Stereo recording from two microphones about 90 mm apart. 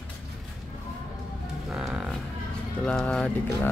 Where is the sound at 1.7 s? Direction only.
5° right (ahead or behind).